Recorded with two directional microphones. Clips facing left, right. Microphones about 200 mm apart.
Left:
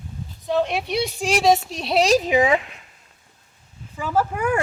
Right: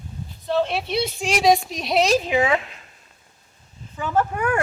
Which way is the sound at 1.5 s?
30° left (ahead or behind).